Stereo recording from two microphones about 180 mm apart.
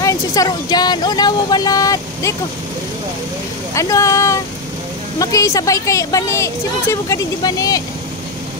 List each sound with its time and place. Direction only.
0.0 s speech: 20° left (ahead or behind)
3.7 s a woman's voice: 15° left (ahead or behind)